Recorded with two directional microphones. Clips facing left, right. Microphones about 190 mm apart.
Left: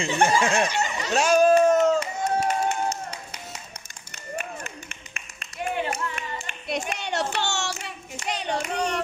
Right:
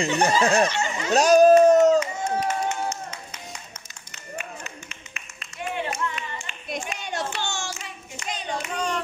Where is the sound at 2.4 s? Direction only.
35° left (ahead or behind).